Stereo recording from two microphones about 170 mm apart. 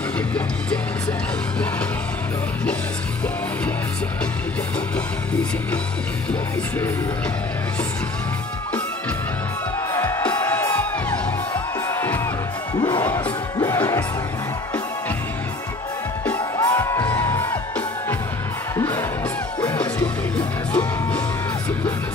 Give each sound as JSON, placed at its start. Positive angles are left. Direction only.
{"t": 4.9, "sound": "music", "side_deg": 5}
{"t": 9.9, "sound": "music", "side_deg": 15}
{"t": 12.7, "sound": "music", "side_deg": 25}
{"t": 16.3, "sound": "music", "side_deg": 20}